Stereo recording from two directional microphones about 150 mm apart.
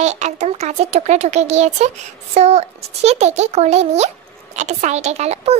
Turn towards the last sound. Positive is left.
turn(degrees=-45)  # may be behind; listen again after turning